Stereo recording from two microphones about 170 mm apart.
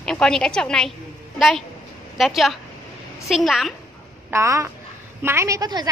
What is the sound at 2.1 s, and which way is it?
A woman's voice, centre (ahead or behind).